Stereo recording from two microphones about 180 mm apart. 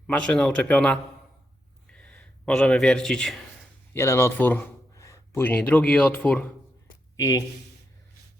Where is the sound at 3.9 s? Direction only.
15° left (ahead or behind).